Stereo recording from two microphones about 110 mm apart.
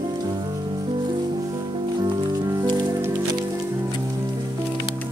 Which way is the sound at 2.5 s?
35° right (ahead or behind).